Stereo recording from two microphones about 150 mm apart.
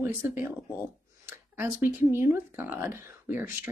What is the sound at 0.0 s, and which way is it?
Speech, 15° right (ahead or behind).